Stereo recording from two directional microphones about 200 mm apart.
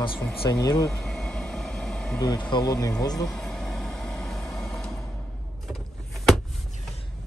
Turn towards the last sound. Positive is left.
turn(degrees=0)  # may be behind; listen again after turning